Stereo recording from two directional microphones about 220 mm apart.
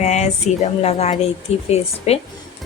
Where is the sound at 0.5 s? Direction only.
30° left (ahead or behind).